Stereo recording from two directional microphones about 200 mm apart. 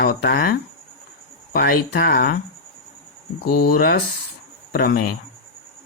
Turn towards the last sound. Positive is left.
turn(degrees=50)  # may be behind; listen again after turning